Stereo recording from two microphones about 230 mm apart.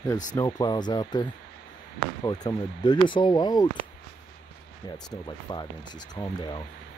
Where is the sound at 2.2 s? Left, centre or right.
Centre.